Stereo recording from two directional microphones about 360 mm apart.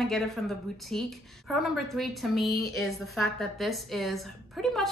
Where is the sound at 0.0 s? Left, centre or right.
Centre.